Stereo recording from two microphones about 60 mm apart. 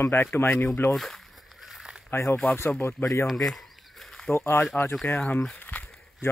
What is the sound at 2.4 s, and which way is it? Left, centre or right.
Speech, left.